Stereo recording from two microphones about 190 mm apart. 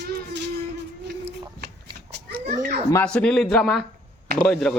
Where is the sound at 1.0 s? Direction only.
60° right (ahead or behind).